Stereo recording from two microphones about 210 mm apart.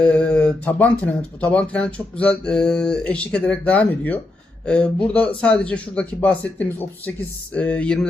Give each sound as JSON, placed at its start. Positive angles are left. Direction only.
{"t": 0.0, "sound": "speech", "side_deg": 5}